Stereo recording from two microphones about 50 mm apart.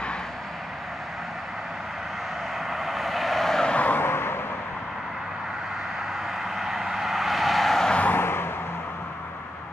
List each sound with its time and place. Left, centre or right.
2.7 s vehicle: centre
3.7 s vehicle: left
4.0 s vehicle: left
6.5 s vehicle: centre
8.1 s a sound: left